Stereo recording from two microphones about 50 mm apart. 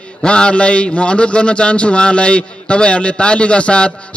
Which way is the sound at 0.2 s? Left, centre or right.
Centre.